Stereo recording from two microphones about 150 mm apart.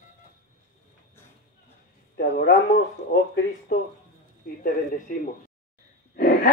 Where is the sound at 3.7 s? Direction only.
60° left (ahead or behind).